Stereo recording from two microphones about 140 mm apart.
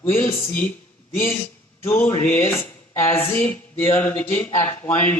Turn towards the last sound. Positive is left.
turn(degrees=15)  # may be behind; listen again after turning